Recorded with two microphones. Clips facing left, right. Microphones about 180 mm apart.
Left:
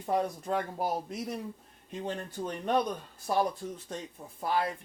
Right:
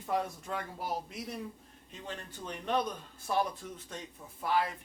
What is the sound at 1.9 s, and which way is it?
Speech, 45° left (ahead or behind).